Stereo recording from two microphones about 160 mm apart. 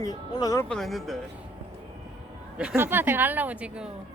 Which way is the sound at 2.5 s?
5° right (ahead or behind).